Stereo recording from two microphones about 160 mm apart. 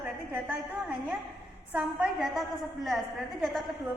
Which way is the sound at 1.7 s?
5° right (ahead or behind).